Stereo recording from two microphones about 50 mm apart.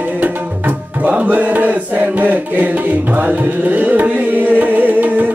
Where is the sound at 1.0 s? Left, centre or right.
Right.